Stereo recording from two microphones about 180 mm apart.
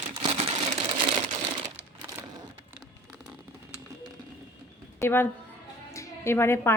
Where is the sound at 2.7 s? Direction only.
5° right (ahead or behind).